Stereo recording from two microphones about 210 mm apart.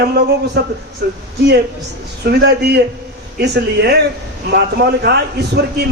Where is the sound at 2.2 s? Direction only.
50° right (ahead or behind).